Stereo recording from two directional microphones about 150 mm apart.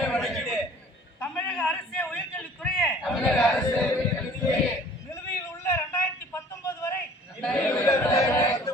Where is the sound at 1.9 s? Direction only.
10° left (ahead or behind).